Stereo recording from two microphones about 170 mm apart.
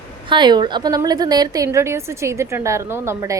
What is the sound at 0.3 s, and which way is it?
A woman's voice, 25° right (ahead or behind).